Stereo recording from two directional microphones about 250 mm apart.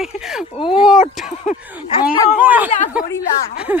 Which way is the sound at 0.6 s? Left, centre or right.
Left.